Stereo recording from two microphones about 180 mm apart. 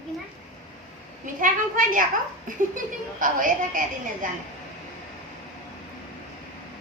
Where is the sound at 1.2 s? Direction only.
50° right (ahead or behind).